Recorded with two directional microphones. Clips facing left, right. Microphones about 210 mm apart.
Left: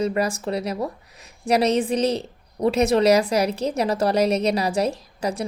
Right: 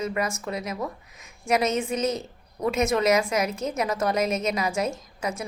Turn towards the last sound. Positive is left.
turn(degrees=35)  # may be behind; listen again after turning